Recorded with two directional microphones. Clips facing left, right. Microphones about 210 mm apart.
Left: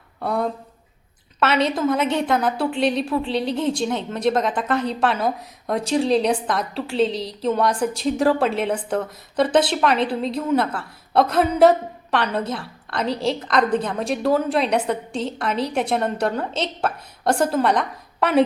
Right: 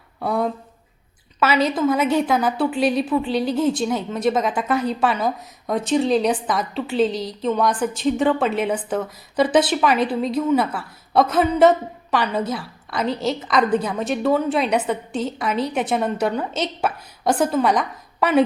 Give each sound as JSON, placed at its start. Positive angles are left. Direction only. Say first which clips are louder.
{"t": 0.2, "sound": "a woman's voice", "louder": "right 1 dB", "side_deg": 0}
{"t": 7.1, "sound": "a woman's voice", "louder": "right 1 dB", "side_deg": 30}
{"t": 7.4, "sound": "a woman's voice", "louder": "even", "side_deg": 0}